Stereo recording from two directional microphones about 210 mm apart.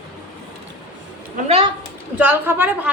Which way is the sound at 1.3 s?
30° right (ahead or behind).